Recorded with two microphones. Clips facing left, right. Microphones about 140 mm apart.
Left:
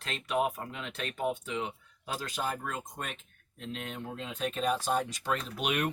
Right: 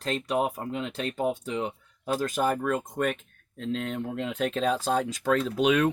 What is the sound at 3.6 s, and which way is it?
Speech, 90° right.